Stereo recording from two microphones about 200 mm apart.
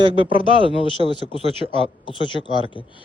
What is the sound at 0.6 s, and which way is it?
Speech, 25° left (ahead or behind).